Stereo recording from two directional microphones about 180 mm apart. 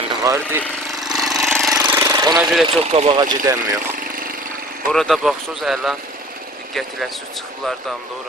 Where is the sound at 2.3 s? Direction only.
Centre (ahead or behind).